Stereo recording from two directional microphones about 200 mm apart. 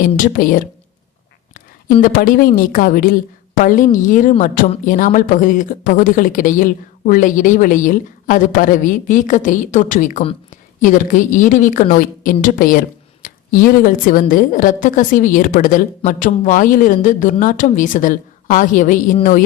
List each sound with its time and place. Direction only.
0.0 s a woman's voice: 45° left (ahead or behind)